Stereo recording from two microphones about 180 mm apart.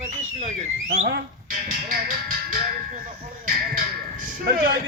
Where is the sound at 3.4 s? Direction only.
50° right (ahead or behind).